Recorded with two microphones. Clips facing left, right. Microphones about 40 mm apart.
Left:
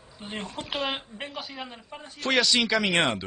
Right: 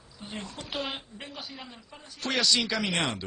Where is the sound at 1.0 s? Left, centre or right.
Left.